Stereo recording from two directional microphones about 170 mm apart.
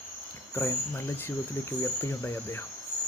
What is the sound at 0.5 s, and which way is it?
Speech, 15° left (ahead or behind).